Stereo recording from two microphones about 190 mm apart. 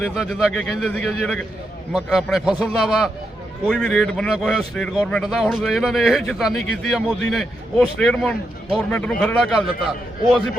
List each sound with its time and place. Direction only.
0.0 s speech: 5° right (ahead or behind)